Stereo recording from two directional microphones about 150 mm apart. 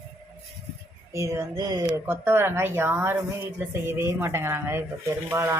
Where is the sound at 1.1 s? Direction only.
20° right (ahead or behind).